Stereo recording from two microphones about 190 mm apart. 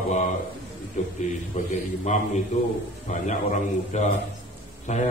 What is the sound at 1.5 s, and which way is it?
Speech, 40° left (ahead or behind).